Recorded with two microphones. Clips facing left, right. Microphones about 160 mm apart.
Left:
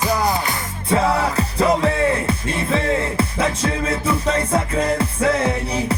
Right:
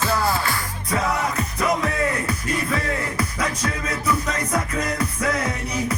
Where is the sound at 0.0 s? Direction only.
15° left (ahead or behind).